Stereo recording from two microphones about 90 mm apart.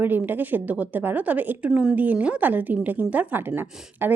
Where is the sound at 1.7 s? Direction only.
5° right (ahead or behind).